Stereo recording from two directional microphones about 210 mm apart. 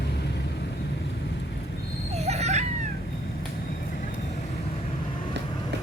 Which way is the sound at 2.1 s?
30° right (ahead or behind).